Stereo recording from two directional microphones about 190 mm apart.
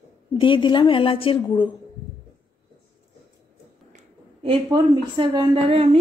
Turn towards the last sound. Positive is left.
turn(degrees=-30)  # may be behind; listen again after turning